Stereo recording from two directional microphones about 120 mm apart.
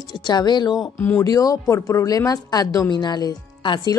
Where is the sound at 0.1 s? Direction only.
35° left (ahead or behind).